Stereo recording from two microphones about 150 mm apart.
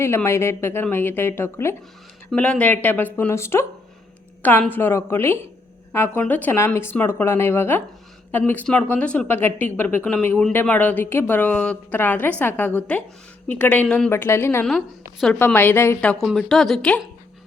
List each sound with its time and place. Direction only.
0.0 s speech: 15° left (ahead or behind)
14.1 s speech: 15° left (ahead or behind)
14.6 s a woman's voice: 5° left (ahead or behind)